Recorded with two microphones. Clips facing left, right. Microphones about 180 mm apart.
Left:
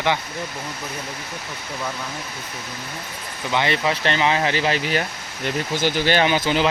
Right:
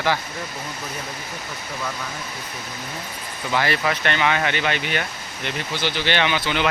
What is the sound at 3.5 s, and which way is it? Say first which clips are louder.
Speech: left 1 dB; 20° left (ahead or behind).